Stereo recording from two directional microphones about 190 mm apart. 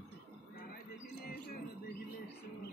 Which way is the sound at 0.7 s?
55° left (ahead or behind).